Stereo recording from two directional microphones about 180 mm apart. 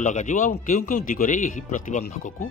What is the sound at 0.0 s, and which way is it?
A man's voice, 45° left (ahead or behind).